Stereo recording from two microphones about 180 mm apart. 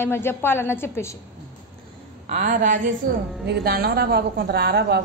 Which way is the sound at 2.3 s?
40° right (ahead or behind).